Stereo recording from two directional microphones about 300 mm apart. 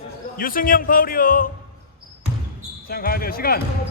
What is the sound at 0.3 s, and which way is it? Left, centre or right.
Speech, left.